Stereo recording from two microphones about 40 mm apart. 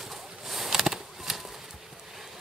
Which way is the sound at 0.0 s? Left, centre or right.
Centre.